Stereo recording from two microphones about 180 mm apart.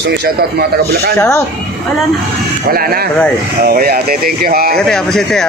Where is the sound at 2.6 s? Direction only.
55° right (ahead or behind).